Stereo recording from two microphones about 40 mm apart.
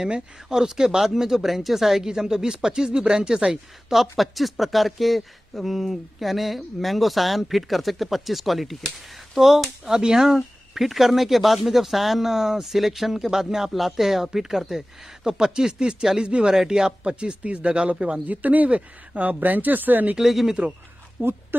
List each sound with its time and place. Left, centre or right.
0.5 s speech: centre
4.2 s speech: centre; by 18.2 s right
18.2 s speech: right
20.2 s speech: centre
21.2 s speech: right